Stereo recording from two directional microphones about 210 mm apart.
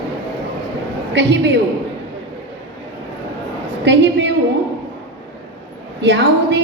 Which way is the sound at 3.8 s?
55° right (ahead or behind).